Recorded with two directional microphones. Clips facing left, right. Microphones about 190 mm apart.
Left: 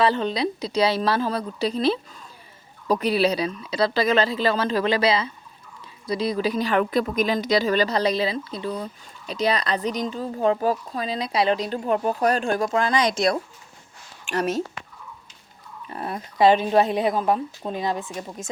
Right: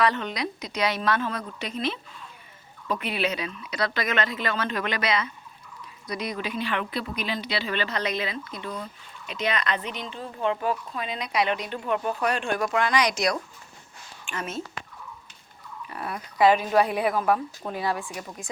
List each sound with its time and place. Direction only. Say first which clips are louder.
0.0 s a woman's voice: left 4 dB; 30° left (ahead or behind)
15.9 s speech: left 4 dB; 30° left (ahead or behind)